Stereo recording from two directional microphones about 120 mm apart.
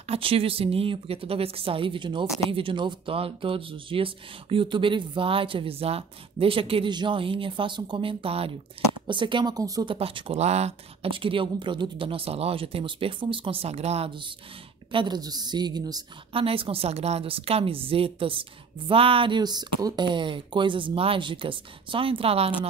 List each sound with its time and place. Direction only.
0.1 s a woman's voice: 50° right (ahead or behind); by 9.8 s 30° right (ahead or behind)
9.8 s a woman's voice: 50° right (ahead or behind); by 11.1 s 65° right (ahead or behind)
11.1 s a woman's voice: 45° right (ahead or behind)
14.9 s a woman's voice: 40° right (ahead or behind)
16.3 s a woman's voice: 50° right (ahead or behind)